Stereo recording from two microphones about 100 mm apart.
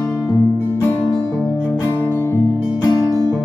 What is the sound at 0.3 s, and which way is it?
Music, 20° left (ahead or behind).